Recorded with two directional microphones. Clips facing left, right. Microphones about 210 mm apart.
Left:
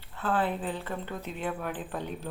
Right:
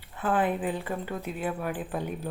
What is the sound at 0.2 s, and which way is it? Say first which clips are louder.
A woman's voice: right 3 dB; 15° right (ahead or behind).